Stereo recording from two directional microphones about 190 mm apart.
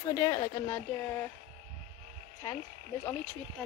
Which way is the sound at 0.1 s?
20° left (ahead or behind).